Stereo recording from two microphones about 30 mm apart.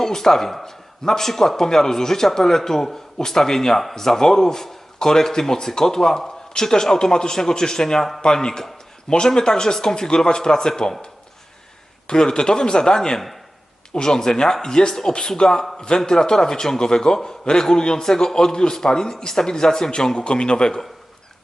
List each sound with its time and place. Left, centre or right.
0.0 s a man's voice: centre
12.0 s a man's voice: left
20.1 s a man's voice: left